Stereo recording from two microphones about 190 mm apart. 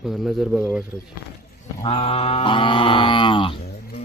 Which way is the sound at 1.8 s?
30° left (ahead or behind).